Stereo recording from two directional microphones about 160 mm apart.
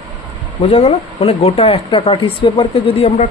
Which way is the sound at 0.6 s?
40° left (ahead or behind).